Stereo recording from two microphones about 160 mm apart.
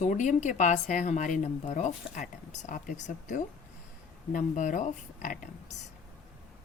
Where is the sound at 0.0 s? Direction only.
50° left (ahead or behind).